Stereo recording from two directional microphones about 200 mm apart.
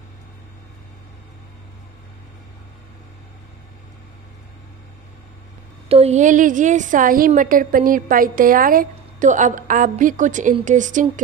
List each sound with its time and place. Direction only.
5.9 s a woman's voice: 30° right (ahead or behind)